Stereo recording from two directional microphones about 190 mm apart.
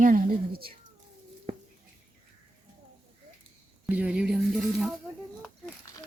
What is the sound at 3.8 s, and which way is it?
Speech, 5° right (ahead or behind).